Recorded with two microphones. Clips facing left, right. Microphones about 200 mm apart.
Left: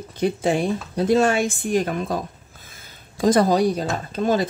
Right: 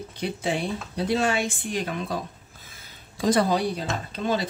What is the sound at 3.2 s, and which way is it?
Speech, 45° left (ahead or behind).